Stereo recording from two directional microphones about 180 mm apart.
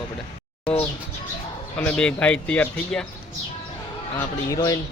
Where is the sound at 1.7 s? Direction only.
5° left (ahead or behind).